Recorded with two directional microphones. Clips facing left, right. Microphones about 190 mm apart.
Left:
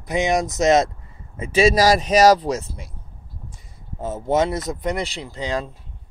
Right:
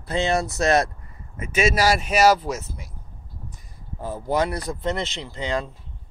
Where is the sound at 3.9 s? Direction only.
20° left (ahead or behind).